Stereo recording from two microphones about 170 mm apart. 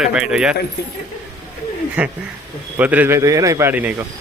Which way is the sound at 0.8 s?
75° left (ahead or behind).